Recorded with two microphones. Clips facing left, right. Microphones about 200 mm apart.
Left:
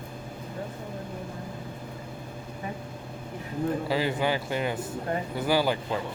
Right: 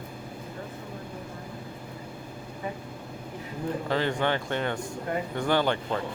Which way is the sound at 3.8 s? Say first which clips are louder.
Right 3 dB; 5° left (ahead or behind).